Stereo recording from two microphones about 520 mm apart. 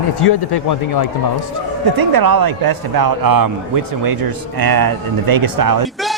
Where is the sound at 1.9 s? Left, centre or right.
Right.